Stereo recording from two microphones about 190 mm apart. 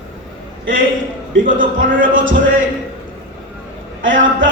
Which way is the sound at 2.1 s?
90° right.